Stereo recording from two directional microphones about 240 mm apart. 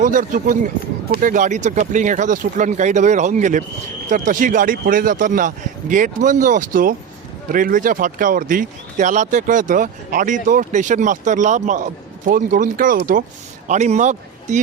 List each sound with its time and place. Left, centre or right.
0.0 s speech: right